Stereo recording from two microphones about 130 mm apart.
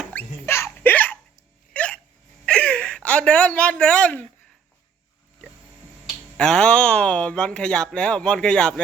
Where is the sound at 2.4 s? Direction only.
10° left (ahead or behind).